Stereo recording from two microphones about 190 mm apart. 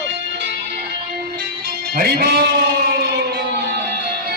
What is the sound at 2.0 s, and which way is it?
Speech, 55° right (ahead or behind).